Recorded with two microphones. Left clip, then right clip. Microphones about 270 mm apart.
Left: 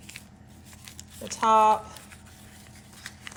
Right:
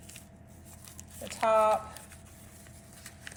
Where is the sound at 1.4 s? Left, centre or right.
Left.